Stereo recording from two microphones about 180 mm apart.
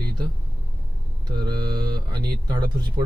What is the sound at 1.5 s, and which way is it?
Speech, 25° right (ahead or behind).